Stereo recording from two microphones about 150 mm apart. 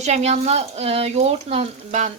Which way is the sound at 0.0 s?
50° right (ahead or behind).